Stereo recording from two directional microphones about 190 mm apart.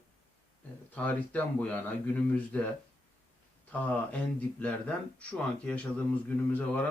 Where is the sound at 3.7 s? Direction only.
5° left (ahead or behind).